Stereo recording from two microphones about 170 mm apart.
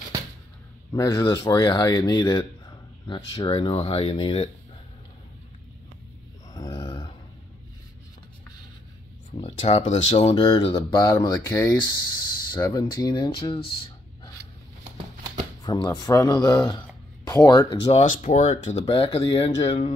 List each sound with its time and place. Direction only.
0.9 s speech: 20° left (ahead or behind)
6.5 s grunt: 30° left (ahead or behind)
9.4 s speech: 40° left (ahead or behind)
10.3 s speech: 25° left (ahead or behind)
11.0 s speech: 20° left (ahead or behind)
12.5 s speech: 25° left (ahead or behind)
15.6 s speech: 25° left (ahead or behind)
17.9 s speech: 50° left (ahead or behind)
18.9 s speech: 30° left (ahead or behind)